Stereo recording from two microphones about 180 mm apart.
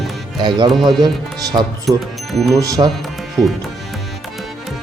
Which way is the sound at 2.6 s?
20° right (ahead or behind).